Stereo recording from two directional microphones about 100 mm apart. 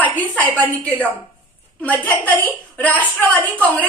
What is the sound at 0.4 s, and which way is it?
A woman's voice, 15° left (ahead or behind).